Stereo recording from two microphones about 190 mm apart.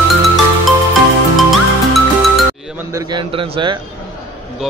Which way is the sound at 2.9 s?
20° right (ahead or behind).